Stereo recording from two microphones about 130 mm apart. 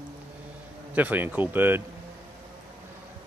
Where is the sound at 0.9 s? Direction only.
15° right (ahead or behind).